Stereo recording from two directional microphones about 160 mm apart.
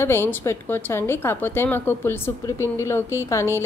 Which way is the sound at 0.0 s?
15° left (ahead or behind).